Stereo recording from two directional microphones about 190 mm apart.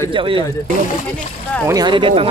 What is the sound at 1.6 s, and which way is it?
Speech, 20° right (ahead or behind).